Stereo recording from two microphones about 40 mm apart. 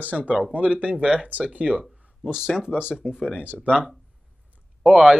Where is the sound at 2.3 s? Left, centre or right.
Centre.